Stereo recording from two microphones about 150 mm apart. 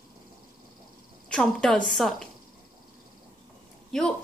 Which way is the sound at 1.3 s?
5° left (ahead or behind).